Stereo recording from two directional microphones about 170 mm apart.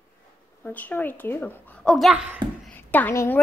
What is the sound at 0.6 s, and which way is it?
A child's voice, 10° left (ahead or behind).